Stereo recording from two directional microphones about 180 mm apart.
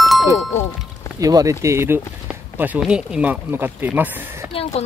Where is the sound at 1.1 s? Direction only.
20° right (ahead or behind).